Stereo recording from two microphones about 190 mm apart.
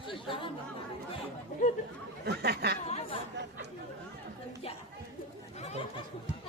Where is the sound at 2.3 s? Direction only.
55° right (ahead or behind).